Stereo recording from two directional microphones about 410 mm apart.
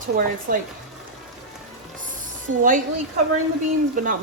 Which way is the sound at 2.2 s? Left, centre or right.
Centre.